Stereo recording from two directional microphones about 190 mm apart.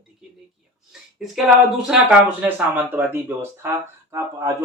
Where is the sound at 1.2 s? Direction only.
Centre (ahead or behind).